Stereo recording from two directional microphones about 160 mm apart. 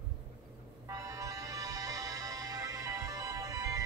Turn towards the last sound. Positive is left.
turn(degrees=-20)  # may be behind; listen again after turning